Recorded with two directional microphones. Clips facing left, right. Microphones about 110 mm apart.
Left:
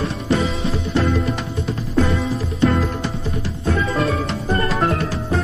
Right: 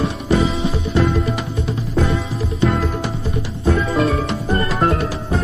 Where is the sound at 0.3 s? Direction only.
Centre (ahead or behind).